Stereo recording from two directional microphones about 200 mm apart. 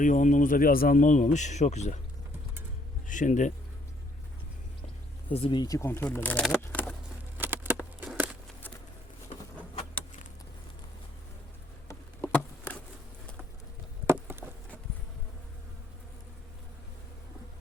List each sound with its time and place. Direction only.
0.0 s speech: 40° left (ahead or behind)
3.1 s speech: 40° left (ahead or behind)
5.3 s speech: 25° left (ahead or behind); by 6.6 s 5° left (ahead or behind)
6.6 s a sound: 10° left (ahead or behind)
7.3 s a sound: 10° right (ahead or behind)
11.9 s insect: 10° left (ahead or behind)
14.3 s insect: 10° right (ahead or behind)